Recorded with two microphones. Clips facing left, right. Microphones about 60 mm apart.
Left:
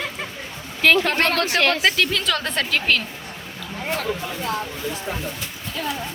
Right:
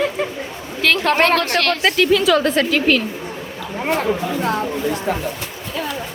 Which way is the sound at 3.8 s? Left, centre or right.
Right.